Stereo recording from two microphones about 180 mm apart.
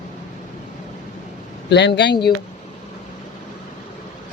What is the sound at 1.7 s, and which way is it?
Speech, 70° left (ahead or behind).